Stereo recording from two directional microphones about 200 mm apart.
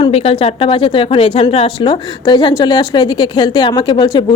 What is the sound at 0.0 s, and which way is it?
Speech, 30° left (ahead or behind).